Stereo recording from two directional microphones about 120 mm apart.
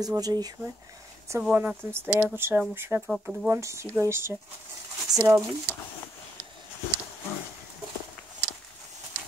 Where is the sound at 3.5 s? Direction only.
25° right (ahead or behind).